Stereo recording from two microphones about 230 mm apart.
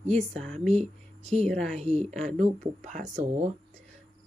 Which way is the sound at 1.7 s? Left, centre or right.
Right.